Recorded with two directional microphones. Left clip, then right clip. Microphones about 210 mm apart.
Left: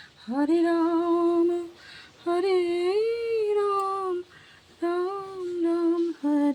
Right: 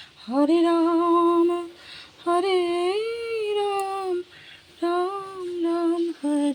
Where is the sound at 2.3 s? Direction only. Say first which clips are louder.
Right 2 dB; 10° left (ahead or behind).